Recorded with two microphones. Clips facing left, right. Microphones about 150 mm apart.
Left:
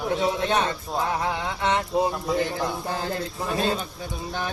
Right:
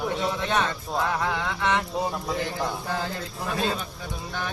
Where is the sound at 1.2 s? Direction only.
25° left (ahead or behind).